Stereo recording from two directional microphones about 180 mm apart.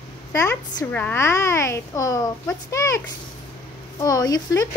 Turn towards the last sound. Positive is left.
turn(degrees=20)  # may be behind; listen again after turning